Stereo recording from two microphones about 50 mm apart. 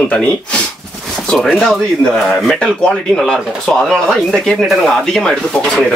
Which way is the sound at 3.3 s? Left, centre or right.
Centre.